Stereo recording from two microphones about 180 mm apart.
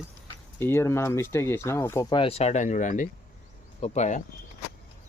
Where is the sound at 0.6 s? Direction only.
15° left (ahead or behind).